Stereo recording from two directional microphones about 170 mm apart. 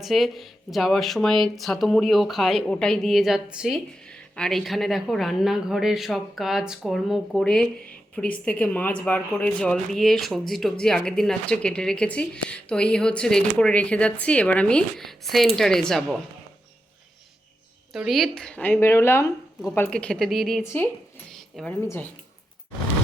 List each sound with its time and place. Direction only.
0.0 s speech: centre (ahead or behind)
17.9 s speech: centre (ahead or behind)
20.7 s speech: 10° left (ahead or behind)